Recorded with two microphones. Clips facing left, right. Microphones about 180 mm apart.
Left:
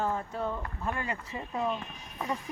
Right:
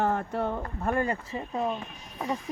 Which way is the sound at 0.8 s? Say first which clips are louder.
Right 8 dB; 45° right (ahead or behind).